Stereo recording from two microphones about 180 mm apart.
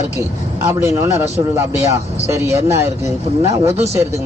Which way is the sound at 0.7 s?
15° right (ahead or behind).